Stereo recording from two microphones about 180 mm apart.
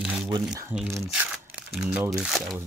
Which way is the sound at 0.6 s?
10° right (ahead or behind).